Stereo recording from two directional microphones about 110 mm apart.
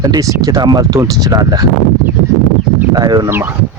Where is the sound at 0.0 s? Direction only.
35° right (ahead or behind).